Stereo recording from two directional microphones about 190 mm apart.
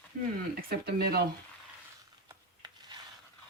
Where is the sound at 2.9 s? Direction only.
25° right (ahead or behind).